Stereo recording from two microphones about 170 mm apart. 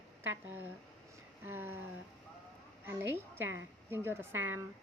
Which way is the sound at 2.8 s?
15° right (ahead or behind).